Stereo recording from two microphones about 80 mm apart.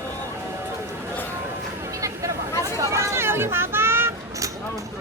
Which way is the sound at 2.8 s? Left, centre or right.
Right.